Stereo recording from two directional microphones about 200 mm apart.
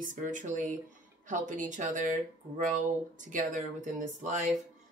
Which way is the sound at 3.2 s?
40° right (ahead or behind).